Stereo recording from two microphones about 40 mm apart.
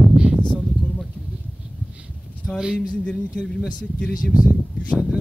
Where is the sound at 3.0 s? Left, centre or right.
Left.